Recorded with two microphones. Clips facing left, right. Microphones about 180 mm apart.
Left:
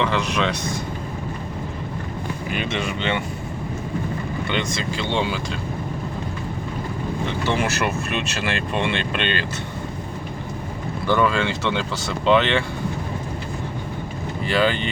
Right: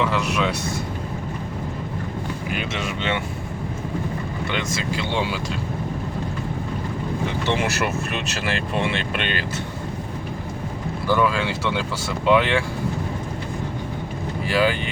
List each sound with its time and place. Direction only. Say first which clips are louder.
0.0 s speech: even; 5° right (ahead or behind)
2.5 s speech: left 3 dB; 5° right (ahead or behind)
4.5 s speech: even; 5° right (ahead or behind)
7.4 s speech: left 1 dB; 20° right (ahead or behind)
7.9 s speech: left 1 dB; centre (ahead or behind)
11.0 s speech: left 1 dB; 5° right (ahead or behind)
14.4 s speech: even; 10° right (ahead or behind)